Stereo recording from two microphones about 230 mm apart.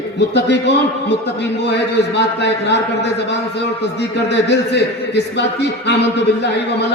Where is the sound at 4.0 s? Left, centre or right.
Left.